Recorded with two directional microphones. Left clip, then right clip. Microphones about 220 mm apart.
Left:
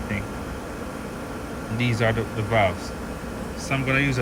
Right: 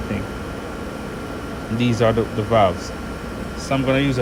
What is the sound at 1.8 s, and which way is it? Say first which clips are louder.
Speech: right 5 dB; 15° right (ahead or behind).